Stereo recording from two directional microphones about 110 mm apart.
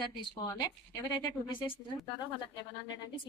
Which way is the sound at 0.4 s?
30° left (ahead or behind).